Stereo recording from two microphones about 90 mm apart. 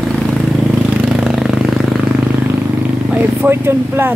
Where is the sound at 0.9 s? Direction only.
5° right (ahead or behind).